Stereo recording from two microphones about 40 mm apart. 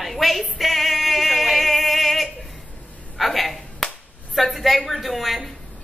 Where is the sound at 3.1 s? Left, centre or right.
Centre.